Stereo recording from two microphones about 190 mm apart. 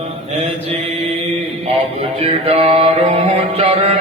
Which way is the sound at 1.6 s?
35° right (ahead or behind).